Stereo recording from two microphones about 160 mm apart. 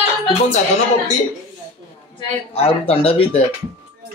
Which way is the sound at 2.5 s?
40° left (ahead or behind).